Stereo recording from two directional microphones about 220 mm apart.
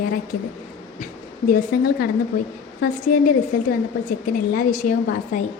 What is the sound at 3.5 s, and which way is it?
A woman's voice, 40° left (ahead or behind).